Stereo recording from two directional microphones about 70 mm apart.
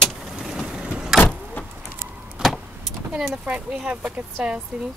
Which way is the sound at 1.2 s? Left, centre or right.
Centre.